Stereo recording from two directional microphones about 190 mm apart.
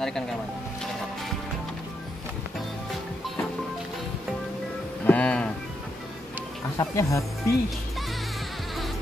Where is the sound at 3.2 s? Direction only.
Centre (ahead or behind).